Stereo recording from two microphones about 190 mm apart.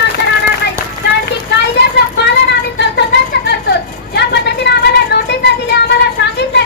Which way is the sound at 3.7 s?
60° left (ahead or behind).